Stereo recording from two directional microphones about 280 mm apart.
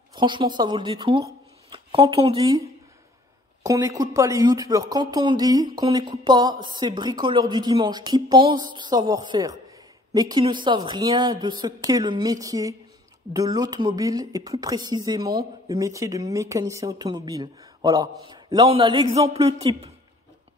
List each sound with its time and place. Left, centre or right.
0.1 s a man's voice: centre